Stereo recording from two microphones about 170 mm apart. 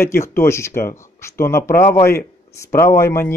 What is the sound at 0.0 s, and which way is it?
Speech, 15° left (ahead or behind).